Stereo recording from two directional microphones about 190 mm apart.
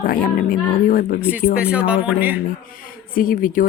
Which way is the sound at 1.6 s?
5° right (ahead or behind).